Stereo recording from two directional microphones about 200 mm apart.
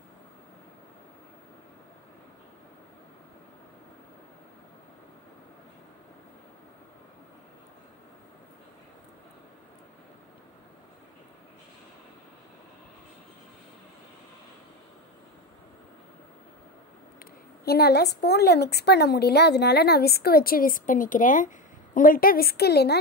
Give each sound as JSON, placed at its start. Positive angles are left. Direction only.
{"t": 17.2, "sound": "a woman's voice", "side_deg": 50}